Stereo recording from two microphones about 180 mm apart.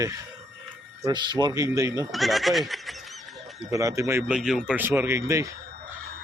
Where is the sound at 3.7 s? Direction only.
15° right (ahead or behind).